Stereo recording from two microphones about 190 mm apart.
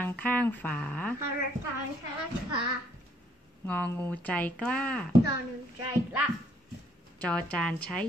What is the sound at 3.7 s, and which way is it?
A woman's voice, 10° left (ahead or behind).